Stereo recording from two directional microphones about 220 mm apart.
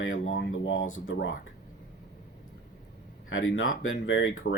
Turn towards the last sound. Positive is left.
turn(degrees=60)  # may be behind; listen again after turning